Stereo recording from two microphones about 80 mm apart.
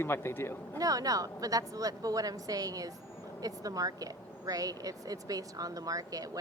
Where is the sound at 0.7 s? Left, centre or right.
Right.